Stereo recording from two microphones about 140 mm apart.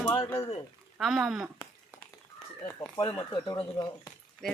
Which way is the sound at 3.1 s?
20° left (ahead or behind).